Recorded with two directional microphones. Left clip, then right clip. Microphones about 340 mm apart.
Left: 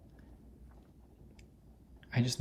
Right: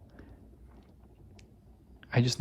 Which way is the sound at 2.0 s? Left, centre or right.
Centre.